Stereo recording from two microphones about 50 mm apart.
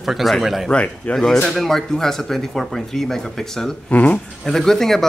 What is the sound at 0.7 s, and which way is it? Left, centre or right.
Speech, left.